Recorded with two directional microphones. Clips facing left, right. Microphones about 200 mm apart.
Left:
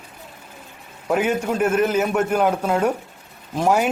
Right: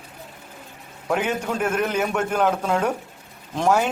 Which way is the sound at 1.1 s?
5° left (ahead or behind).